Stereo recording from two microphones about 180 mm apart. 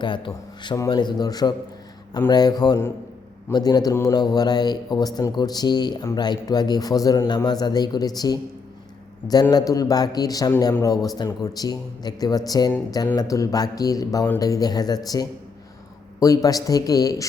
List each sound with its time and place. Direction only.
0.0 s a man's voice: 25° left (ahead or behind)